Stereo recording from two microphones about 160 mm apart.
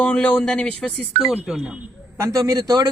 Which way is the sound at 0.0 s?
10° left (ahead or behind).